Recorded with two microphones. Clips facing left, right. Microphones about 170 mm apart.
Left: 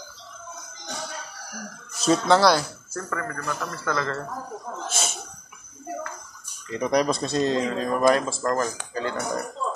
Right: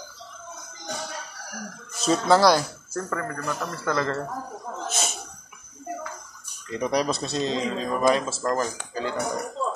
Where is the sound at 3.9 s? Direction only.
30° right (ahead or behind).